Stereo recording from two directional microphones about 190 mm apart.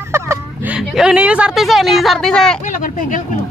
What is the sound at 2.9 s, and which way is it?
Speech, 45° left (ahead or behind).